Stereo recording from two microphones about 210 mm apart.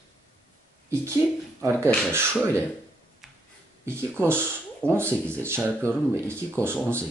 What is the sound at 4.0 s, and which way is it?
Speech, 10° right (ahead or behind).